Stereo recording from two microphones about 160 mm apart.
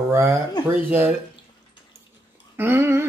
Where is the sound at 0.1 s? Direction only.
20° right (ahead or behind).